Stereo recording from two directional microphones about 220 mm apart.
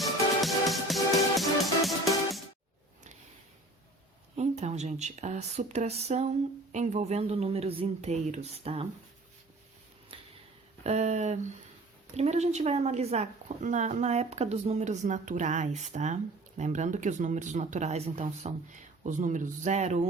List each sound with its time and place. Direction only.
0.0 s music: centre (ahead or behind)
4.4 s a woman's voice: 30° right (ahead or behind)
10.1 s a sound: 25° right (ahead or behind)
10.8 s a woman's voice: 30° right (ahead or behind)